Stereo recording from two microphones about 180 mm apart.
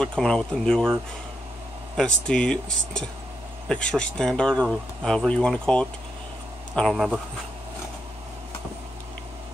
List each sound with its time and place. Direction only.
0.0 s speech: 5° left (ahead or behind)
2.0 s speech: 5° left (ahead or behind)